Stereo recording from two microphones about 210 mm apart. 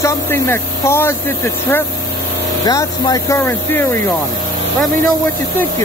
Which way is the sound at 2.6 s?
15° left (ahead or behind).